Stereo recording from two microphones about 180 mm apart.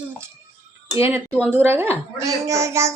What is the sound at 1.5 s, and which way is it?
A child's voice, 10° right (ahead or behind).